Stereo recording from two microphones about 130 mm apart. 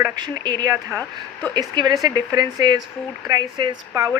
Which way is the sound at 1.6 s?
30° right (ahead or behind).